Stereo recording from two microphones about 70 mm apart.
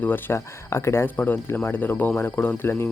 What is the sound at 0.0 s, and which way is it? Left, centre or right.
Speech, left.